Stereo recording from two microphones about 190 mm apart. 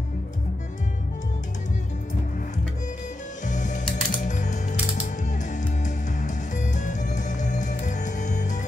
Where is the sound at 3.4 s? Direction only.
40° left (ahead or behind).